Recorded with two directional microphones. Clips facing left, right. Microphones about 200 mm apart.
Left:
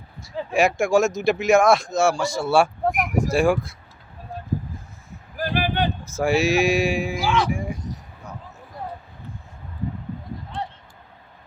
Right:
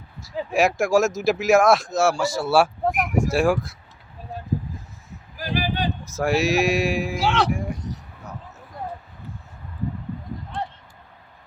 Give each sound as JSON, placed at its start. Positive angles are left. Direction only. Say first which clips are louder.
{"t": 0.2, "sound": "speech", "louder": "even", "side_deg": 0}
{"t": 5.4, "sound": "a sound", "louder": "left 2 dB", "side_deg": 55}
{"t": 6.1, "sound": "speech", "louder": "left 1 dB", "side_deg": 0}
{"t": 7.3, "sound": "speech", "louder": "even", "side_deg": -70}
{"t": 7.5, "sound": "speech", "louder": "even", "side_deg": 0}